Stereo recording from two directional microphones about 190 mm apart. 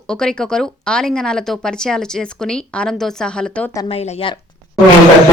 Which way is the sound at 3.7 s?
30° left (ahead or behind).